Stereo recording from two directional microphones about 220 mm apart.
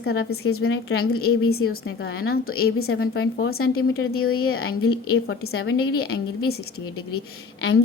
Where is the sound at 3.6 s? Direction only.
75° left (ahead or behind).